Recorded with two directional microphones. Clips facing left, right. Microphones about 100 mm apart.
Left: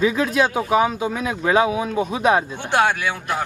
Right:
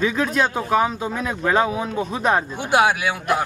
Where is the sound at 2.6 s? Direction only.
10° right (ahead or behind).